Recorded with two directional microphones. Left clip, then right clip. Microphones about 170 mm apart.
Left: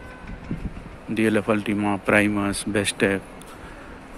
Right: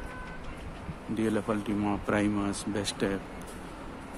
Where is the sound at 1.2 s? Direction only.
20° left (ahead or behind).